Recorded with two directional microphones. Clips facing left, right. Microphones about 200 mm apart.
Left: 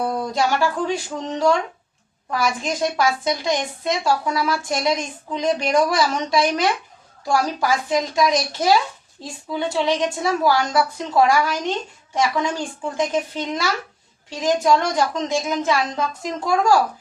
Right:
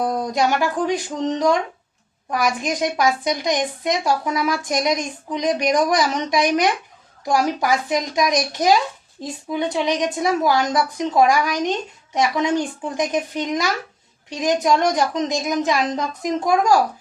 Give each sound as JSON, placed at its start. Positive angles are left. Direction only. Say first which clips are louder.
{"t": 0.0, "sound": "a woman's voice", "louder": "right 1 dB", "side_deg": -20}